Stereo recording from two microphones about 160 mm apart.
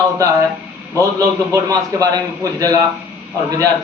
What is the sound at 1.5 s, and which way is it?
A man's voice, 20° right (ahead or behind).